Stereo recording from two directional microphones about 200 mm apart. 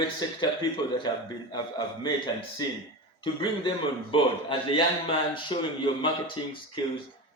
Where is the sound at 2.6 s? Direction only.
20° left (ahead or behind).